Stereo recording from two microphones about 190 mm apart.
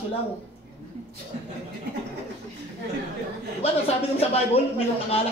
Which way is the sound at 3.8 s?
30° left (ahead or behind).